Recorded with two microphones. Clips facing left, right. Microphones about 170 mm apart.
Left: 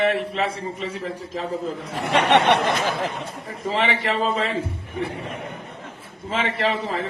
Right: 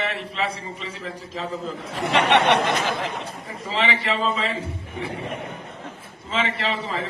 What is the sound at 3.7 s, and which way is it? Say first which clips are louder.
Speech: left 1 dB; 50° left (ahead or behind).